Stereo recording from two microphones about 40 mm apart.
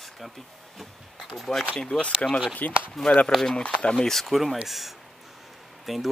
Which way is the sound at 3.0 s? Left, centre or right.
Left.